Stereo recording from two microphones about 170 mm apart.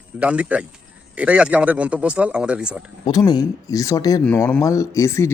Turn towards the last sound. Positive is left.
turn(degrees=15)  # may be behind; listen again after turning